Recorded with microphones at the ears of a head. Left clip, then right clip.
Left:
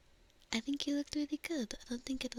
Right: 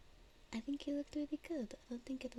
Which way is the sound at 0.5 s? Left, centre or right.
Left.